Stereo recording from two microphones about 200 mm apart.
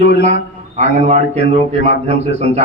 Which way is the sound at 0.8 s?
35° right (ahead or behind).